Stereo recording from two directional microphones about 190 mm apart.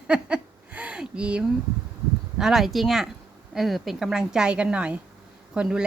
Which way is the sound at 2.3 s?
Centre (ahead or behind).